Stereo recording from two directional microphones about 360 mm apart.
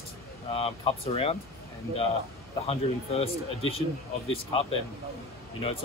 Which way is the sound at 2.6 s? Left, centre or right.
Centre.